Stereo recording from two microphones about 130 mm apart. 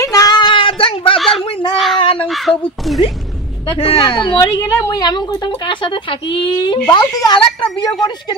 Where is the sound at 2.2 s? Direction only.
Centre (ahead or behind).